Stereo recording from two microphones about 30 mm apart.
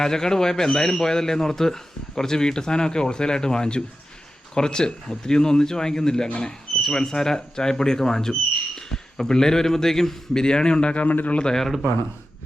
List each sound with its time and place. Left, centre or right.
0.0 s speech: left
10.4 s speech: left
11.0 s a man's voice: left